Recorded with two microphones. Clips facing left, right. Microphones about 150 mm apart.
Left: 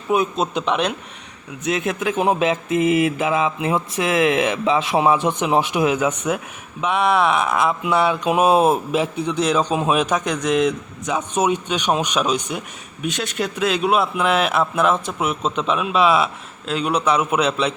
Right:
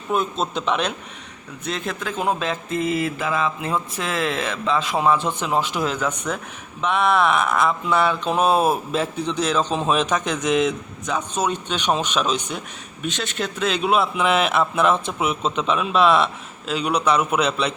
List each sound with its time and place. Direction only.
0.1 s a man's voice: centre (ahead or behind)
1.7 s a man's voice: 20° left (ahead or behind); by 8.7 s centre (ahead or behind)
8.7 s a man's voice: 10° left (ahead or behind)
11.0 s a man's voice: 10° left (ahead or behind)